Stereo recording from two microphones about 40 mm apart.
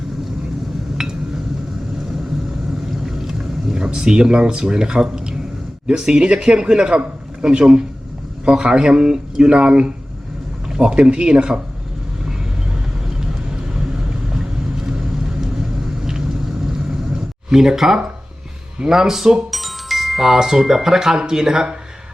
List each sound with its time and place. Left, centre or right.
1.0 s a sound: centre
3.1 s a sound: centre
5.9 s speech: centre
13.1 s vehicle: centre
14.8 s vehicle: centre
17.5 s speech: centre
19.5 s speech: centre